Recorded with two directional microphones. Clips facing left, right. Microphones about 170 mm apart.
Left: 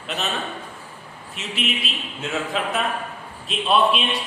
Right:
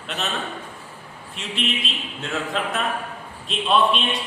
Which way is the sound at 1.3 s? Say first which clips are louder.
Even; 5° left (ahead or behind).